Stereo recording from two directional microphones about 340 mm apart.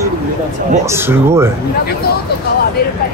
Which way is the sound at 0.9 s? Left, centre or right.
Centre.